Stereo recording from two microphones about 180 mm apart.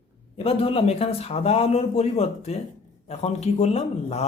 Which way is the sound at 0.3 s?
35° left (ahead or behind).